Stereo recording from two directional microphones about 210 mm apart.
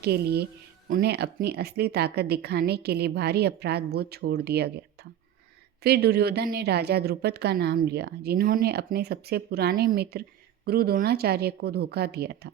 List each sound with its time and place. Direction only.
0.0 s a woman's voice: 50° right (ahead or behind)
5.8 s a woman's voice: 50° right (ahead or behind)